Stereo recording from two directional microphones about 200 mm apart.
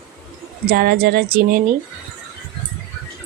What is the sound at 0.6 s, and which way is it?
Speech, 50° right (ahead or behind).